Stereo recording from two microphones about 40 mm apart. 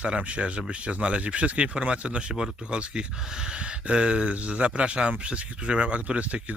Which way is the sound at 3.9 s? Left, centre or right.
Right.